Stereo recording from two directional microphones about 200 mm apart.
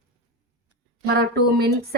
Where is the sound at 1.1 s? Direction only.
55° right (ahead or behind).